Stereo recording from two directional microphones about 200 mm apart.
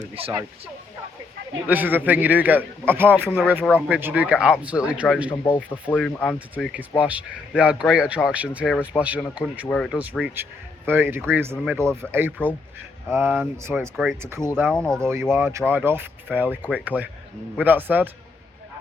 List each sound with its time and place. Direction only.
0.1 s speech: 30° right (ahead or behind)
1.6 s a man's voice: 10° right (ahead or behind)
5.9 s speech: 10° left (ahead or behind)
6.5 s a man's voice: 5° right (ahead or behind)
9.6 s speech: 5° left (ahead or behind)
9.9 s a man's voice: 5° right (ahead or behind)
14.2 s a man's voice: 15° right (ahead or behind)
14.7 s speech: 5° left (ahead or behind)
15.0 s a man's voice: 10° right (ahead or behind)